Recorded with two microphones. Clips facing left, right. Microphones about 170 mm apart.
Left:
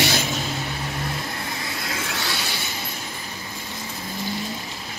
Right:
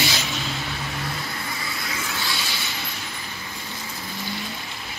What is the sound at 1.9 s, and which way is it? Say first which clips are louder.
Vehicle: left 2 dB; 75° left (ahead or behind).